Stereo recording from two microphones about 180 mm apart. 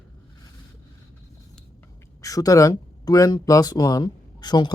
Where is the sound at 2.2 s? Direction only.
20° left (ahead or behind).